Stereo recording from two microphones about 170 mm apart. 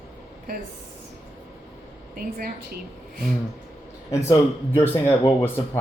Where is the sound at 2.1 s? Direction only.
55° right (ahead or behind).